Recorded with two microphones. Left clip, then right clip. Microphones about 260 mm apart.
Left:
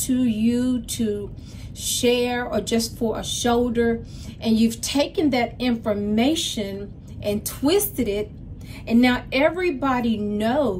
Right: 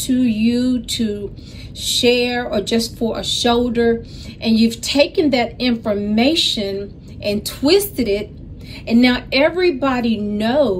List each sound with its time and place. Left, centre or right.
0.0 s a woman's voice: centre